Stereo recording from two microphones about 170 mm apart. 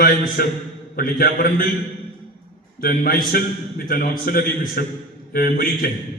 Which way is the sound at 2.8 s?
55° left (ahead or behind).